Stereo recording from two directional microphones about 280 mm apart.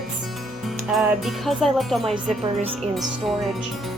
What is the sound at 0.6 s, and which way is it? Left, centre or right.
Speech, centre.